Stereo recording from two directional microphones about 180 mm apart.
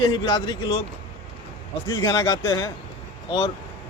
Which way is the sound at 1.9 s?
20° left (ahead or behind).